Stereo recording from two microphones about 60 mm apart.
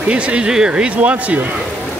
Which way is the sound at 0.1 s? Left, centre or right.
Centre.